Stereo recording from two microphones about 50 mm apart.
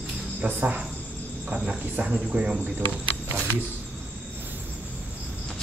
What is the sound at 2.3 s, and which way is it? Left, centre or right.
Speech, right.